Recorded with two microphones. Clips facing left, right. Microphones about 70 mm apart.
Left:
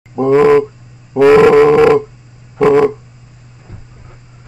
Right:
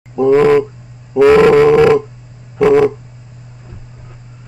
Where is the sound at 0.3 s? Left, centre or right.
Centre.